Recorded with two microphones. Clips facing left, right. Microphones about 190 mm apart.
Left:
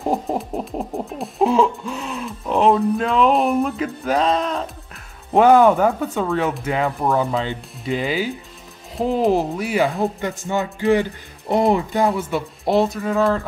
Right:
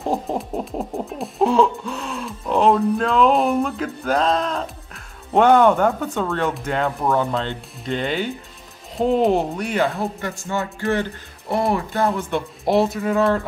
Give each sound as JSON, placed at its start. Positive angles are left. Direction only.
{"t": 0.0, "sound": "music", "side_deg": 5}
{"t": 9.9, "sound": "speech", "side_deg": 20}
{"t": 12.1, "sound": "music", "side_deg": 5}